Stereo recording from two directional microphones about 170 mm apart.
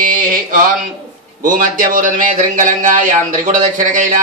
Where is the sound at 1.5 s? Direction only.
50° right (ahead or behind).